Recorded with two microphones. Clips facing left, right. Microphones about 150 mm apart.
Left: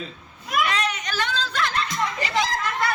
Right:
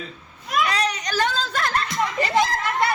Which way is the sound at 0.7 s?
35° right (ahead or behind).